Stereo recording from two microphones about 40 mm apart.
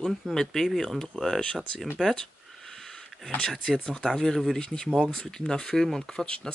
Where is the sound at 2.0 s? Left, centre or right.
Right.